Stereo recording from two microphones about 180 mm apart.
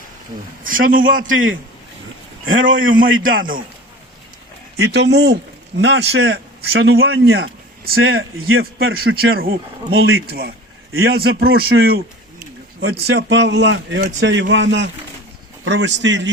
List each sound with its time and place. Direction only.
0.6 s speech: 50° right (ahead or behind)
1.3 s a man's voice: 90° right
4.8 s a man's voice: 75° right (ahead or behind)
10.9 s a man's voice: 75° right (ahead or behind); by 11.9 s 55° right (ahead or behind)
12.8 s a man's voice: 70° right (ahead or behind)
14.2 s a man's voice: 90° right